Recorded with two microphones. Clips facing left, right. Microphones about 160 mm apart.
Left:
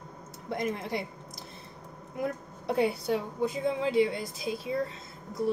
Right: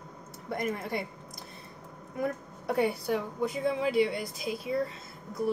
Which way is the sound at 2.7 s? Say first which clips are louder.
Left 1 dB; 25° left (ahead or behind).